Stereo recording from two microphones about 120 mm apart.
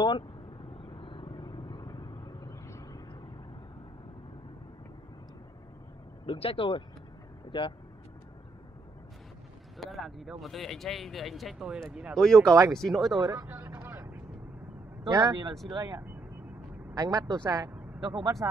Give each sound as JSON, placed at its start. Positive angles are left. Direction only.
{"t": 0.8, "sound": "vehicle", "side_deg": 50}
{"t": 6.2, "sound": "speech", "side_deg": 50}
{"t": 9.8, "sound": "speech", "side_deg": 0}
{"t": 12.5, "sound": "speech", "side_deg": -25}
{"t": 12.8, "sound": "speech", "side_deg": 0}
{"t": 13.2, "sound": "vehicle", "side_deg": -30}
{"t": 15.0, "sound": "speech", "side_deg": -30}
{"t": 18.4, "sound": "speech", "side_deg": -20}